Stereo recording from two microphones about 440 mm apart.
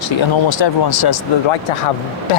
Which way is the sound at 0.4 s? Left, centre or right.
Left.